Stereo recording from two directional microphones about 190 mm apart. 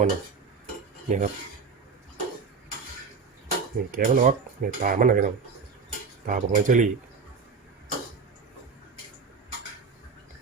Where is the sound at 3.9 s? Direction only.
45° right (ahead or behind).